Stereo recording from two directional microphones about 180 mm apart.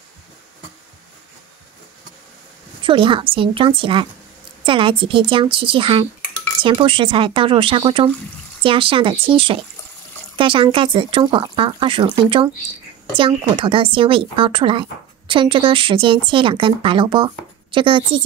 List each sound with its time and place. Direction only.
2.8 s speech: 30° right (ahead or behind)